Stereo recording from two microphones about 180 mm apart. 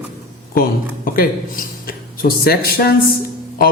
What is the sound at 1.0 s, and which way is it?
Speech, 50° left (ahead or behind).